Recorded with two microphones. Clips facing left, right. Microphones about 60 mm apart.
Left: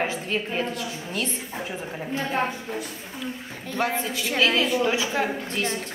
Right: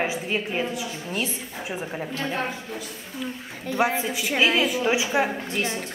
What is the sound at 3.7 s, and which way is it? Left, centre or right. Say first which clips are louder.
A woman's voice: right 3 dB; centre.